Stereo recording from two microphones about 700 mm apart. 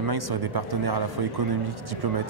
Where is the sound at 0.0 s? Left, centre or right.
Right.